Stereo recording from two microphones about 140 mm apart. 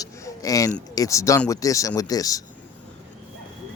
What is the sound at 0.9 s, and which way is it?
Speech, 25° left (ahead or behind).